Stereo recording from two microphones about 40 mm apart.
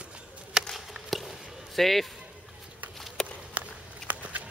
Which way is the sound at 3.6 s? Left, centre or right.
Right.